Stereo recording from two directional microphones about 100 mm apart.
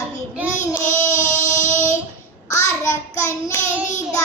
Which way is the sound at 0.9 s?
25° left (ahead or behind).